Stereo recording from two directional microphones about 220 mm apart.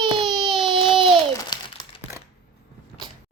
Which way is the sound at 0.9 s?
25° right (ahead or behind).